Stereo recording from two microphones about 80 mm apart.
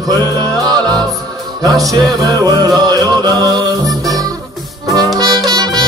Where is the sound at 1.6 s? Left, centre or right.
Right.